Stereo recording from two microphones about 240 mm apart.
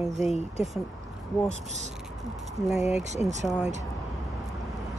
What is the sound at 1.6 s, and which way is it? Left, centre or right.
Speech, right.